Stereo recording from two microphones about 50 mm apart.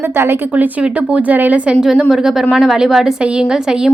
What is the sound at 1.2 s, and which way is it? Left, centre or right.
Speech, right.